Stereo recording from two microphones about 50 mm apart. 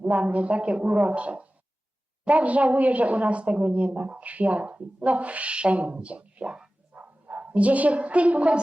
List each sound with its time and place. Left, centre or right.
0.0 s a woman's voice: right
6.9 s speech: right